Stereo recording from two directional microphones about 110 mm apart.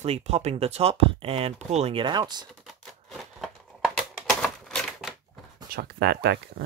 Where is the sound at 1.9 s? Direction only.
45° right (ahead or behind).